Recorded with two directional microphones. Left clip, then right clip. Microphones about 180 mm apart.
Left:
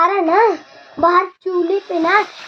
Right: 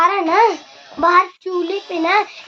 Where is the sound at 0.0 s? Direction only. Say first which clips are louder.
Even; 15° right (ahead or behind).